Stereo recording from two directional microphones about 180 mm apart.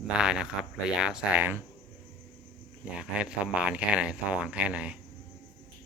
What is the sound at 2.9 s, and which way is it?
Speech, 5° right (ahead or behind).